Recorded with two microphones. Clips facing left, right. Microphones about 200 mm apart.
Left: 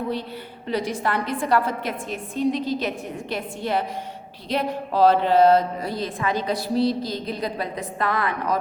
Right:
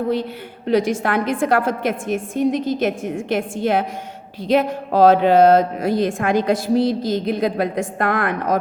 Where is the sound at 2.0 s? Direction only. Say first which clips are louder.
Right 3 dB; 50° right (ahead or behind).